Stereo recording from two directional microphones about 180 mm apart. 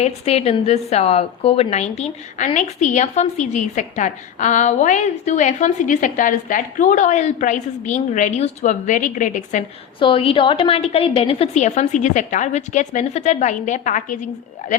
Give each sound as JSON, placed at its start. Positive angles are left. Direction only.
{"t": 0.0, "sound": "a woman's voice", "side_deg": 35}
{"t": 10.0, "sound": "a woman's voice", "side_deg": 30}